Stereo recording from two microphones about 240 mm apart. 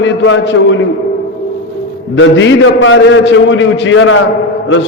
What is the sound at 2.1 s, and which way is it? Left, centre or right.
A man's voice, left.